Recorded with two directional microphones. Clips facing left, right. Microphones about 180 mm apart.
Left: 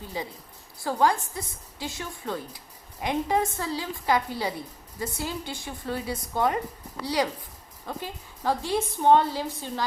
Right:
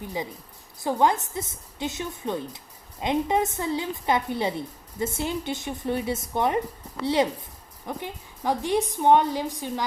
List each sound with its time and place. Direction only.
0.0 s a woman's voice: 20° right (ahead or behind)